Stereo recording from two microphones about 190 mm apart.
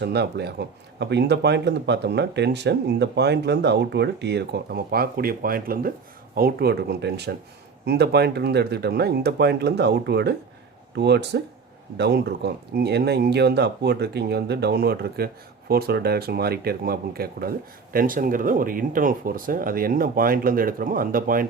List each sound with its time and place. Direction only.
0.0 s speech: 60° right (ahead or behind)